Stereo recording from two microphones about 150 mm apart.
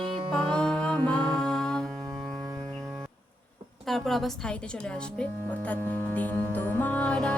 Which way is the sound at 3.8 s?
Centre (ahead or behind).